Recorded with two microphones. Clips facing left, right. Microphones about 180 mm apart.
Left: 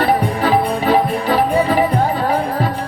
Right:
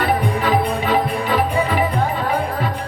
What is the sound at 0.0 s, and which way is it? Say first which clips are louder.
Music: left 3 dB; 35° left (ahead or behind).